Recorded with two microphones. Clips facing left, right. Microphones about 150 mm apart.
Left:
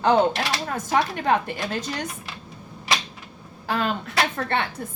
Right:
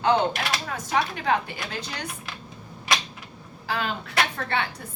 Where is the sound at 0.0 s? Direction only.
45° left (ahead or behind).